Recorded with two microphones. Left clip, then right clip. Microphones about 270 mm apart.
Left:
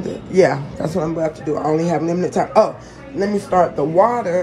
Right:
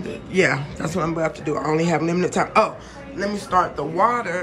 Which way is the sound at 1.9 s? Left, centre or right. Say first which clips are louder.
Left 2 dB; centre.